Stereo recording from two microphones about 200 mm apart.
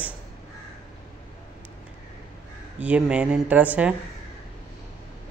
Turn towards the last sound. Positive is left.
turn(degrees=-5)  # may be behind; listen again after turning